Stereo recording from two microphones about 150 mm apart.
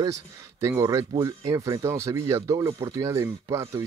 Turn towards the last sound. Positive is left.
turn(degrees=-20)  # may be behind; listen again after turning